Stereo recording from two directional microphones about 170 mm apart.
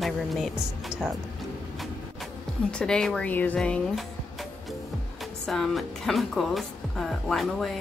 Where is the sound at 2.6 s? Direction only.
5° left (ahead or behind).